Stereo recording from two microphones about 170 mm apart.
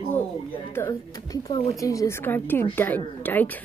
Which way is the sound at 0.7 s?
15° left (ahead or behind).